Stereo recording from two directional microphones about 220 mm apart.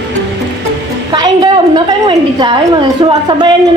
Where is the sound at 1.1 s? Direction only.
20° right (ahead or behind).